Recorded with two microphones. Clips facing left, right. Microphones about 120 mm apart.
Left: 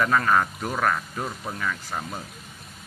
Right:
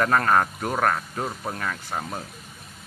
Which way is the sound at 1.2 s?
25° right (ahead or behind).